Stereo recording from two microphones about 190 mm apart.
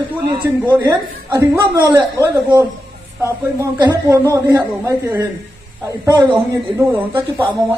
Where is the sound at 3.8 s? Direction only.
20° right (ahead or behind).